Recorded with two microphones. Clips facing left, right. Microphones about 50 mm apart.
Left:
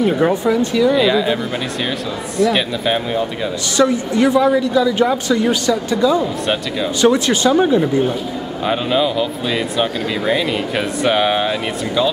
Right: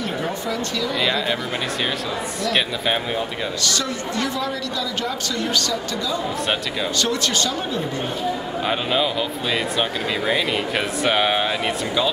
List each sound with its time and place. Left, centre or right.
0.3 s a woman's voice: centre
0.9 s speech: centre
3.6 s a woman's voice: centre
6.4 s speech: centre
7.0 s a woman's voice: centre
8.6 s speech: centre